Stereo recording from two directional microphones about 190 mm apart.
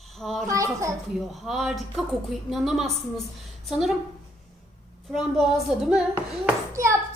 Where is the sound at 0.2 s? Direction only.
Centre (ahead or behind).